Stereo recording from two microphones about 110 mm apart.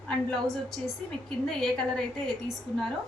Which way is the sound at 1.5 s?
5° left (ahead or behind).